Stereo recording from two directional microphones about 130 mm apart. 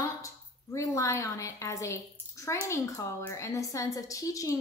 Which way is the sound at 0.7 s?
25° left (ahead or behind).